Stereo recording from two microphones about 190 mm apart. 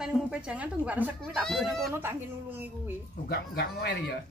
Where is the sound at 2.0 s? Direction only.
10° right (ahead or behind).